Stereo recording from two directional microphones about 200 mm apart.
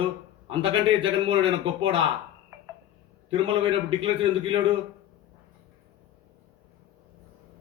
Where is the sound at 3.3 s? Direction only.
25° right (ahead or behind).